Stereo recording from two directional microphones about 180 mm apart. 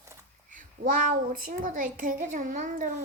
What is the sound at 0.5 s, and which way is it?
A woman's voice, 50° right (ahead or behind).